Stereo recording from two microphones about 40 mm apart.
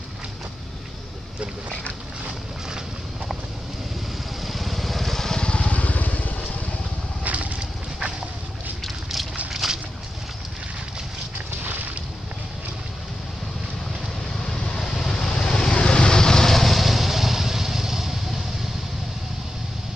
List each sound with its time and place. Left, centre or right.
4.4 s vehicle: centre
5.5 s vehicle: left
7.2 s vehicle: right
8.8 s a sound: centre
9.6 s boat: centre
11.6 s boat: right
14.4 s vehicle: centre